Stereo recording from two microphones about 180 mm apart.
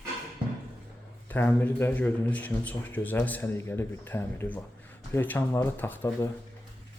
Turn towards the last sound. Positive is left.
turn(degrees=10)  # may be behind; listen again after turning